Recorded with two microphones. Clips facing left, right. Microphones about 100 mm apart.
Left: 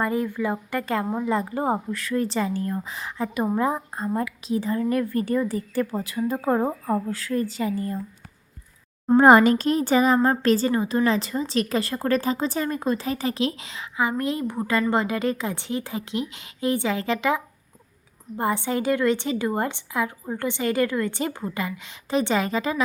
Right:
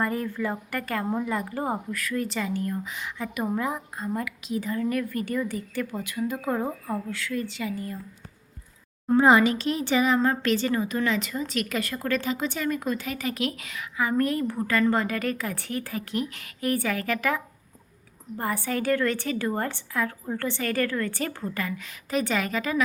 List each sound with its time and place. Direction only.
0.0 s a woman's voice: 20° left (ahead or behind); by 7.9 s 35° left (ahead or behind)
9.1 s a woman's voice: 50° left (ahead or behind); by 22.8 s 25° left (ahead or behind)